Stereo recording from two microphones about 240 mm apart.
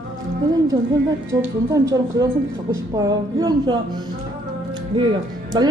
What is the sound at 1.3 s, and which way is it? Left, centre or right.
Speech, centre.